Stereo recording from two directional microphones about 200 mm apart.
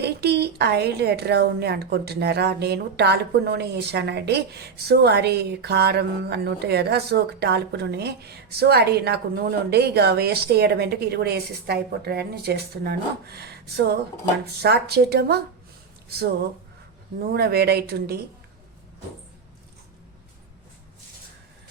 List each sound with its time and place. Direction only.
0.0 s a woman's voice: 55° right (ahead or behind)